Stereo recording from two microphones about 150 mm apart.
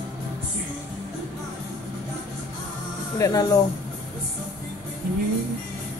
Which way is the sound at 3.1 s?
20° left (ahead or behind).